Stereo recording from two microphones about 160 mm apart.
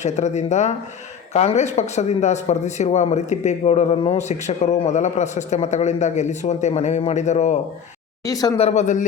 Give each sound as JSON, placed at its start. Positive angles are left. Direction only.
{"t": 0.0, "sound": "a man's voice", "side_deg": 45}
{"t": 8.3, "sound": "speech", "side_deg": 25}
{"t": 8.5, "sound": "a man's voice", "side_deg": 45}